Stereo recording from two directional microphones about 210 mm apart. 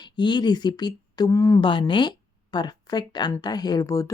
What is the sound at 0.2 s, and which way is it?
A woman's voice, 20° left (ahead or behind).